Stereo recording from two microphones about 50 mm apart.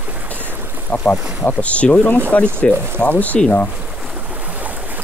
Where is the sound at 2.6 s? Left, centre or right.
Centre.